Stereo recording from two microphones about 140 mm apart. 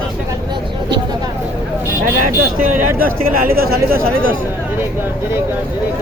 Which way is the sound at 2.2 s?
70° right (ahead or behind).